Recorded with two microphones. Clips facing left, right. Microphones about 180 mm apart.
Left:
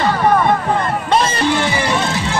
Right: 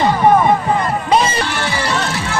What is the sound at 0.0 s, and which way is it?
Music, 20° right (ahead or behind).